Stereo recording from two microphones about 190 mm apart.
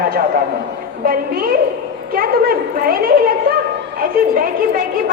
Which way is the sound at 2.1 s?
50° right (ahead or behind).